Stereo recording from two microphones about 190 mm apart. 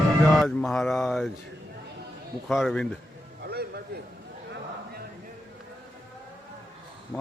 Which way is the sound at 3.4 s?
55° right (ahead or behind).